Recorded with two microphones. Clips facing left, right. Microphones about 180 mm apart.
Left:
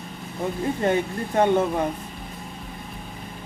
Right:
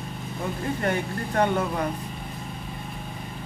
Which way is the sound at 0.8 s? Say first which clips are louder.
Left 5 dB; 20° left (ahead or behind).